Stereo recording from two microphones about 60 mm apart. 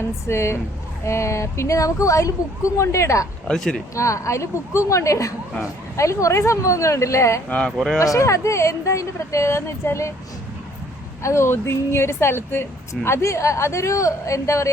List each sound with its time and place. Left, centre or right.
0.3 s a woman's voice: left
2.7 s a woman's voice: left
3.4 s speech: centre
3.9 s speech: left
11.2 s a woman's voice: left
13.1 s speech: left